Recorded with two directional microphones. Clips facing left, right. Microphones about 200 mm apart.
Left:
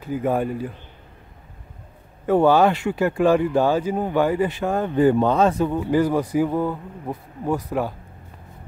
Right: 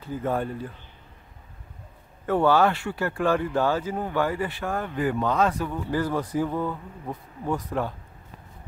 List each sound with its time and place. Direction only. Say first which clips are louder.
0.0 s speech: left 5 dB; 10° left (ahead or behind)
2.2 s speech: left 5 dB; 15° left (ahead or behind)